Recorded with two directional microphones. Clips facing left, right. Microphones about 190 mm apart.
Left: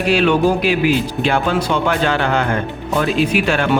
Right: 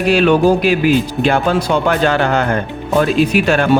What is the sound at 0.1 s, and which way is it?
Speech, 45° right (ahead or behind).